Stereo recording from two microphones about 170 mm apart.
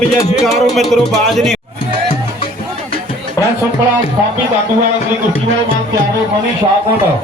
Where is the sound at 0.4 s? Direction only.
Centre (ahead or behind).